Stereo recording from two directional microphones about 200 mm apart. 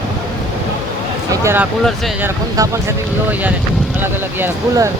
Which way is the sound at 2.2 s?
10° right (ahead or behind).